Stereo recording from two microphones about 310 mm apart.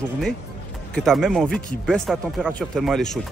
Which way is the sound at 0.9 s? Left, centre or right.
Centre.